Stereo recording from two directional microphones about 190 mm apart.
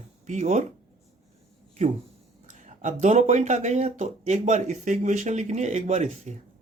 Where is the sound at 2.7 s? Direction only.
40° right (ahead or behind).